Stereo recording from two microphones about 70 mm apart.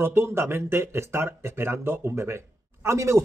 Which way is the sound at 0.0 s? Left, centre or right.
Right.